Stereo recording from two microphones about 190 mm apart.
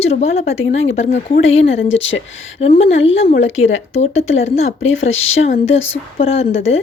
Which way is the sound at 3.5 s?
90° left.